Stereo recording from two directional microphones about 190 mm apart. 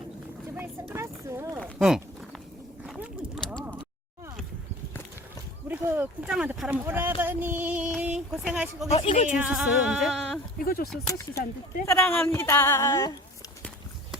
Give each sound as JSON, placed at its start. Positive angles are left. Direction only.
{"t": 0.5, "sound": "a sound", "side_deg": -10}
{"t": 1.6, "sound": "speech", "side_deg": 0}
{"t": 2.8, "sound": "a sound", "side_deg": 0}
{"t": 5.6, "sound": "speech", "side_deg": -10}
{"t": 8.9, "sound": "speech", "side_deg": 30}
{"t": 9.3, "sound": "speech", "side_deg": -5}
{"t": 10.6, "sound": "speech", "side_deg": 50}
{"t": 11.9, "sound": "a woman's voice", "side_deg": 10}